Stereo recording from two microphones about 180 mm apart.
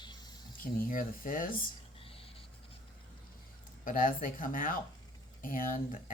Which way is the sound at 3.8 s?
50° left (ahead or behind).